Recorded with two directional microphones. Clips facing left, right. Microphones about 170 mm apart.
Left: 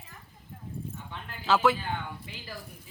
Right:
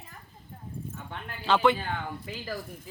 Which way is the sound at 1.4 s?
5° left (ahead or behind).